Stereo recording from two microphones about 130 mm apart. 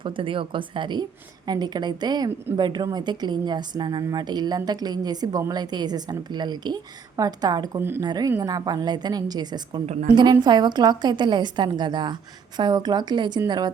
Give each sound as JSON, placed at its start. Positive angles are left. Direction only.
{"t": 0.0, "sound": "a woman's voice", "side_deg": -40}
{"t": 7.8, "sound": "speech", "side_deg": -15}
{"t": 8.0, "sound": "a woman's voice", "side_deg": -30}
{"t": 9.8, "sound": "a woman's voice", "side_deg": -60}
{"t": 10.4, "sound": "a woman's voice", "side_deg": -35}